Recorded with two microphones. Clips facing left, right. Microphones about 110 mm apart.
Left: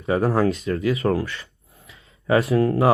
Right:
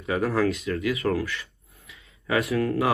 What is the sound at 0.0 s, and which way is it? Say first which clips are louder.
Speech: left 4 dB; 35° left (ahead or behind).